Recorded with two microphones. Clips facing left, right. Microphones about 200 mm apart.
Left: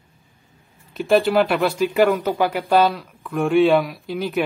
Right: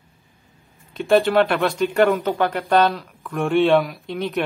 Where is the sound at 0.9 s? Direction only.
Centre (ahead or behind).